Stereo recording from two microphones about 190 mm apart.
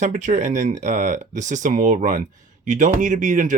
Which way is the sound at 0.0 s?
40° right (ahead or behind).